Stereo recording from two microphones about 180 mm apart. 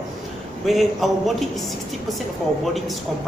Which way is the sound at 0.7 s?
Centre (ahead or behind).